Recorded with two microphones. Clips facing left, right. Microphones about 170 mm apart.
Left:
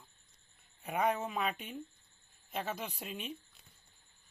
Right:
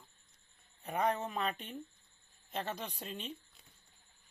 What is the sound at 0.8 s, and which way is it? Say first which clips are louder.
Speech: left 1 dB; 10° left (ahead or behind).